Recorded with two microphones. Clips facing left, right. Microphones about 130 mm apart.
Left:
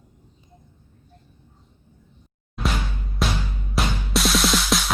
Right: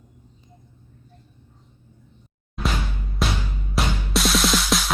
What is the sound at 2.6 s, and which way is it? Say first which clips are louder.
Music: even; centre (ahead or behind).